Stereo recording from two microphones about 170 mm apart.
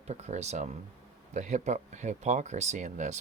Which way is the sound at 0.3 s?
40° right (ahead or behind).